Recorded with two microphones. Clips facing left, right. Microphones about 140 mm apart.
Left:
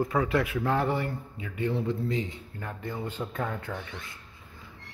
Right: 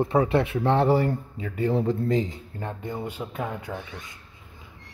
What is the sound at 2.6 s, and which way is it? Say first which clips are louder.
Speech: right 3 dB; 20° right (ahead or behind).